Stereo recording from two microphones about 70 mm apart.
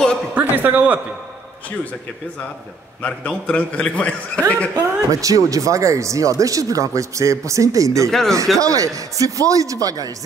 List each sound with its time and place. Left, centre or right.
0.3 s a man's voice: right
3.0 s a man's voice: centre
4.7 s speech: right
8.1 s speech: centre
8.5 s a man's voice: right